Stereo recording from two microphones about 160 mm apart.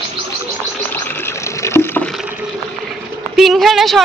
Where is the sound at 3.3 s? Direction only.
Centre (ahead or behind).